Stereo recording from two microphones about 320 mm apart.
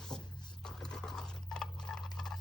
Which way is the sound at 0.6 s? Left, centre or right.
Centre.